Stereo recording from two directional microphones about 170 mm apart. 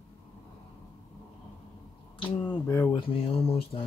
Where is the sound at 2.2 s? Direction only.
25° left (ahead or behind).